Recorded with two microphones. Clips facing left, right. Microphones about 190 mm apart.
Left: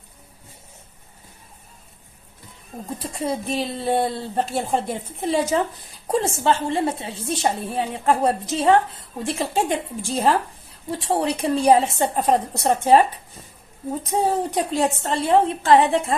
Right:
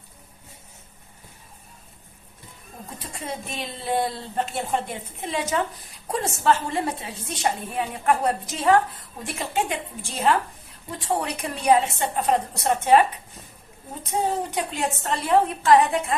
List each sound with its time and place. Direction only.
3.2 s a woman's voice: 35° left (ahead or behind)
14.0 s a woman's voice: 35° left (ahead or behind)